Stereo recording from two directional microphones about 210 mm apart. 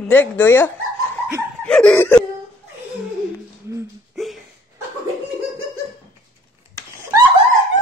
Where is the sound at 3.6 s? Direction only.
15° right (ahead or behind).